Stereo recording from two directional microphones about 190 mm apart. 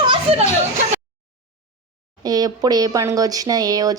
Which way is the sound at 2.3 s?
20° right (ahead or behind).